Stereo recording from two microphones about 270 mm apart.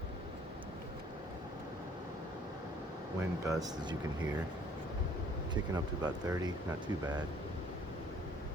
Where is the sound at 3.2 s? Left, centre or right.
Centre.